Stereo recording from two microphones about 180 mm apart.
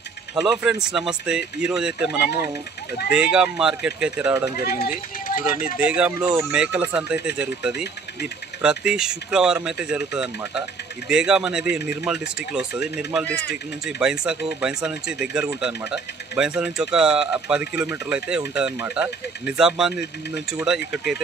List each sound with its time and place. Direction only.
0.4 s speech: 5° right (ahead or behind)
4.6 s speech: 55° left (ahead or behind)
5.8 s speech: 5° right (ahead or behind)